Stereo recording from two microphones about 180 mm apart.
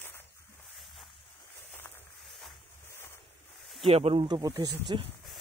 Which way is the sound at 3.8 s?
30° right (ahead or behind).